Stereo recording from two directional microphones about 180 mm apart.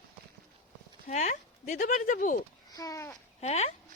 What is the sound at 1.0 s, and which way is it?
Speech, 40° left (ahead or behind).